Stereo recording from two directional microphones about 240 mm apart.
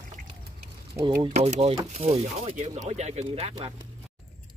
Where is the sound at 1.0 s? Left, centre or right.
Right.